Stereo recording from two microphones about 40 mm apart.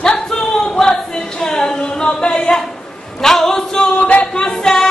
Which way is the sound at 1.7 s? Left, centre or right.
Centre.